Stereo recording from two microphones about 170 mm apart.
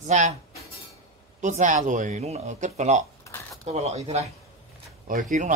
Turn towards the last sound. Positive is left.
turn(degrees=-50)  # may be behind; listen again after turning